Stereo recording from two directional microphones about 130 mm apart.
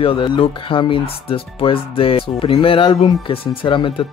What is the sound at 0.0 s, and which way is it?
Speech, 45° left (ahead or behind).